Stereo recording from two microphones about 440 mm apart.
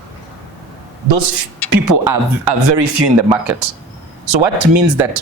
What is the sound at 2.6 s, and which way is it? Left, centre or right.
Speech, right.